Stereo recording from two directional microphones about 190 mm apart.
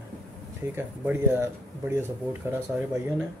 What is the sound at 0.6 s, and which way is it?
Speech, 10° right (ahead or behind).